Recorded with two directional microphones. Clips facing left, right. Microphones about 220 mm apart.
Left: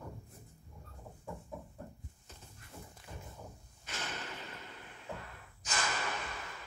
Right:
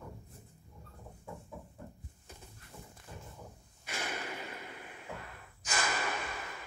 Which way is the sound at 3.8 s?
10° right (ahead or behind).